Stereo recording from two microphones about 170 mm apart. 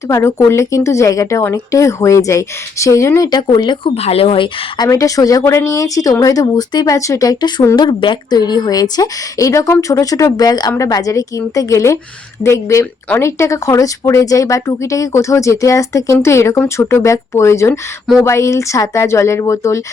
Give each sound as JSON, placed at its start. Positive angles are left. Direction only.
{"t": 0.1, "sound": "speech", "side_deg": 15}
{"t": 4.8, "sound": "speech", "side_deg": 20}